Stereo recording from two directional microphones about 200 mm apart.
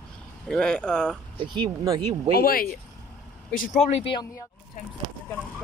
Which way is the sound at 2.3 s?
50° left (ahead or behind).